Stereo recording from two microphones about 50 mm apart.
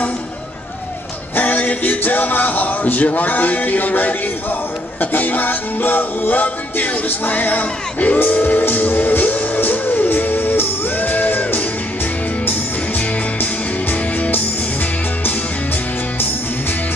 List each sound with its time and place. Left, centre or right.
1.3 s speech: left
5.1 s music: left
14.1 s music: left